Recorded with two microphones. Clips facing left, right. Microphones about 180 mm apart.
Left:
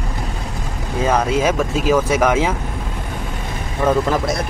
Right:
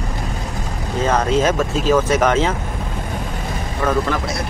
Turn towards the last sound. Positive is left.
turn(degrees=20)  # may be behind; listen again after turning